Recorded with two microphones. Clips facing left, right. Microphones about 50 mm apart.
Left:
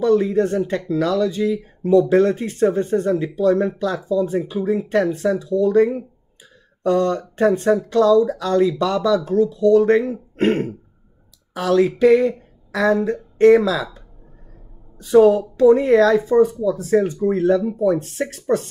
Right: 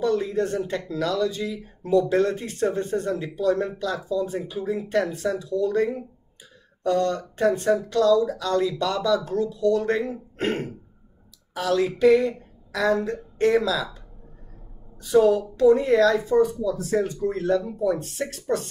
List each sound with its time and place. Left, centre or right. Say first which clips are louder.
0.0 s speech: left 7 dB; left
15.1 s speech: left 6 dB; left